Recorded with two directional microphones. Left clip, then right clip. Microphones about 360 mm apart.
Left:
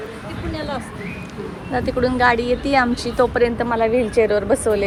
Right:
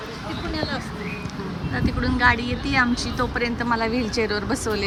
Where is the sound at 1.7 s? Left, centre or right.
Centre.